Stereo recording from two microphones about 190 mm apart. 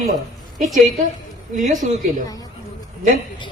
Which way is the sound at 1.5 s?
45° right (ahead or behind).